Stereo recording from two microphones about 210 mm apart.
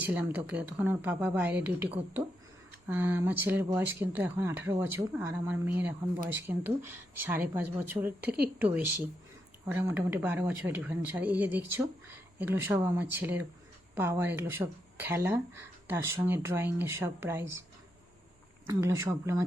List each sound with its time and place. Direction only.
0.0 s speech: 5° right (ahead or behind)
8.2 s speech: 50° right (ahead or behind)
8.6 s speech: 10° right (ahead or behind)
18.7 s speech: 15° right (ahead or behind)